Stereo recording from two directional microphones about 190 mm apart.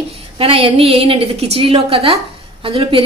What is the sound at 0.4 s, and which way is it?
A woman's voice, 30° right (ahead or behind).